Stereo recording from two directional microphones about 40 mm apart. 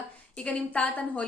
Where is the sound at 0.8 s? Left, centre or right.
Left.